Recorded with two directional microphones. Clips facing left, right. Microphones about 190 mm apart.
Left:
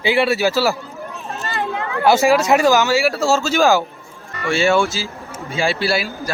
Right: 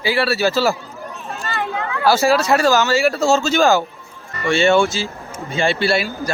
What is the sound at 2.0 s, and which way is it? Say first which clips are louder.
Speech: left 1 dB; 20° left (ahead or behind).